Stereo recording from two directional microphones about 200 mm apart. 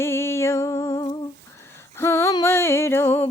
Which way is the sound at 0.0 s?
10° left (ahead or behind).